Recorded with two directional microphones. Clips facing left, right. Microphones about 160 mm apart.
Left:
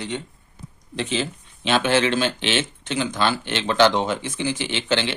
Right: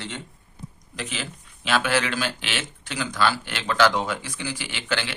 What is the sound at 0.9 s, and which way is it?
Speech, 25° left (ahead or behind).